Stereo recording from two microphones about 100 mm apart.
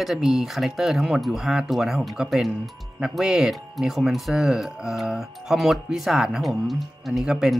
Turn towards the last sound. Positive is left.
turn(degrees=-5)  # may be behind; listen again after turning